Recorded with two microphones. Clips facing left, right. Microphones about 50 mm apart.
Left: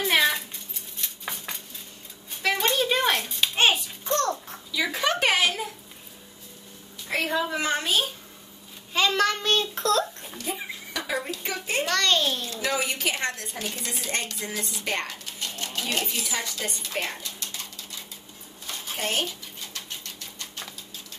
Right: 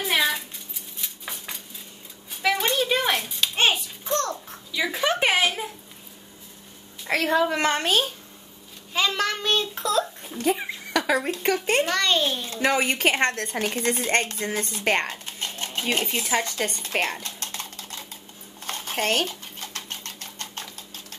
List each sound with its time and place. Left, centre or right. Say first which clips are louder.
0.0 s cat: left 1 dB; centre
1.0 s a sound: left 1 dB; centre
2.4 s dishes: right 1 dB; centre
3.3 s music: even; centre
5.0 s a sound: right 1 dB; centre
7.1 s a woman's voice: right 5 dB; right
8.9 s a child's voice: left 1 dB; centre
10.4 s a sound: right 9 dB; right
11.4 s a child's voice: right 7 dB; right
11.9 s a child's voice: right 1 dB; centre
12.4 s a woman's voice: right 5 dB; right
18.7 s typewriter: right 5 dB; right